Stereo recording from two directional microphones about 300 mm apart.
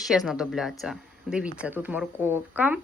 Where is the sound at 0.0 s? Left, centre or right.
Centre.